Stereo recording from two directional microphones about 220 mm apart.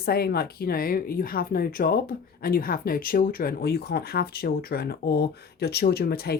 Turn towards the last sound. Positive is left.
turn(degrees=45)  # may be behind; listen again after turning